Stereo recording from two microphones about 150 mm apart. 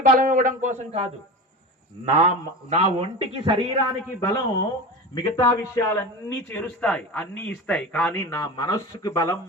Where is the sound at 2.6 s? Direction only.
45° right (ahead or behind).